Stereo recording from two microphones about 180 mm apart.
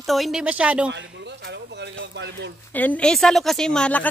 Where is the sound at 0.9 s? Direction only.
85° right; by 2.5 s 70° right (ahead or behind).